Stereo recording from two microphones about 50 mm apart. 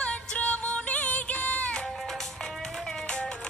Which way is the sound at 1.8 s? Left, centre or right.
Centre.